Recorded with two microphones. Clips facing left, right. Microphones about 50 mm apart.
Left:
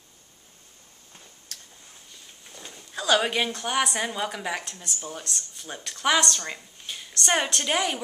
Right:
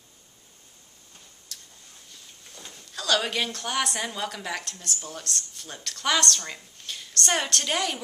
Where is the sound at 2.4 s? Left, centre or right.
Centre.